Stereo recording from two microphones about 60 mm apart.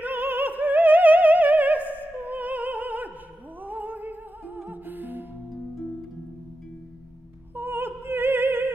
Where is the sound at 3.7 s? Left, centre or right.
Right.